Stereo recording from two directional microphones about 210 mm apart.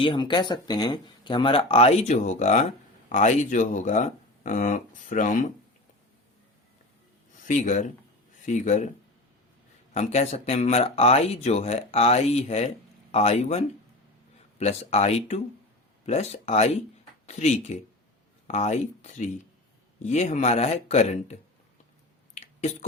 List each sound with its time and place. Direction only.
0.0 s speech: 20° left (ahead or behind); by 5.5 s 35° left (ahead or behind)
7.4 s speech: 35° left (ahead or behind)
9.9 s speech: 30° left (ahead or behind)